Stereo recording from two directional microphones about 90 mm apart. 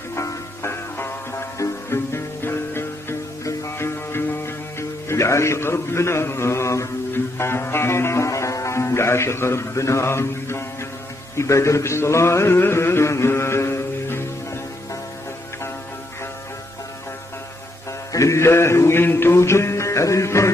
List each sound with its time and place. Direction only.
0.1 s music: 30° left (ahead or behind)
11.3 s a sound: 35° left (ahead or behind)
18.1 s music: 35° left (ahead or behind)